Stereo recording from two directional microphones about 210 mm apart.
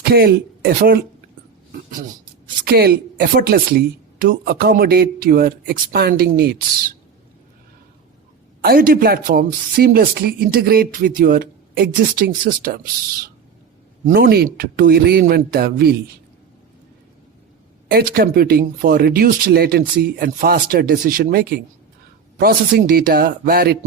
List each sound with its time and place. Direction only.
0.0 s speech: 50° right (ahead or behind)
2.6 s speech: 50° right (ahead or behind)
8.6 s speech: 45° right (ahead or behind)
17.9 s speech: 45° right (ahead or behind)